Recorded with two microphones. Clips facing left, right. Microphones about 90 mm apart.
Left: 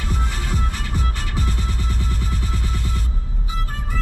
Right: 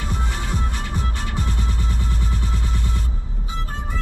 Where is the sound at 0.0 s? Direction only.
5° right (ahead or behind).